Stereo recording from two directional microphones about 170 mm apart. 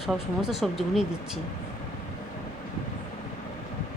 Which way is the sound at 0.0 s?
Centre (ahead or behind).